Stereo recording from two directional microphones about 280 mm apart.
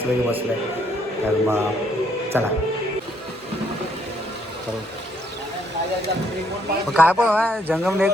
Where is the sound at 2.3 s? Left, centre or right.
Centre.